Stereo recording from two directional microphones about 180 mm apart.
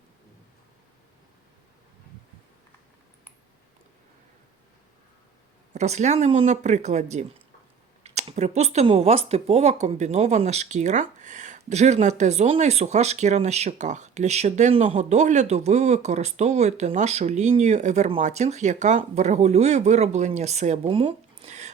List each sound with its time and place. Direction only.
5.7 s speech: 40° right (ahead or behind)